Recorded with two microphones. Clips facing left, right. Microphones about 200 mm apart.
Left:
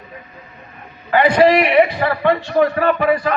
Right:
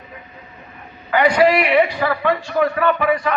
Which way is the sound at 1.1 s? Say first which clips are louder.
Left 2 dB; 30° left (ahead or behind).